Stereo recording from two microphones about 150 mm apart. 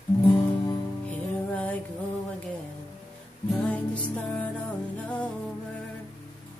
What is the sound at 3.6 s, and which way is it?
Music, 10° left (ahead or behind).